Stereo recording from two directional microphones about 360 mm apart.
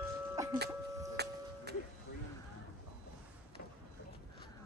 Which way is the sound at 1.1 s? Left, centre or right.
Right.